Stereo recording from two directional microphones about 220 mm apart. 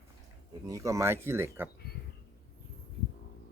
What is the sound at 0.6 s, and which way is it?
A man's voice, 15° right (ahead or behind).